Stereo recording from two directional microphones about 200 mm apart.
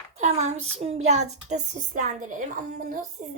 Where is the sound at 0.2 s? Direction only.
35° right (ahead or behind).